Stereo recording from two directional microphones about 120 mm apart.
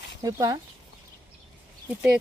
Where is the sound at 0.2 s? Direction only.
30° right (ahead or behind).